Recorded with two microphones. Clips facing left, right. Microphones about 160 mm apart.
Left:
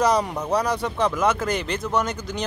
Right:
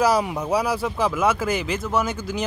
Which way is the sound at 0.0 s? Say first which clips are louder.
Right 1 dB; 5° right (ahead or behind).